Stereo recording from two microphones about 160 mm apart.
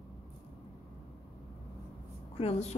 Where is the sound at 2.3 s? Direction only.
40° left (ahead or behind).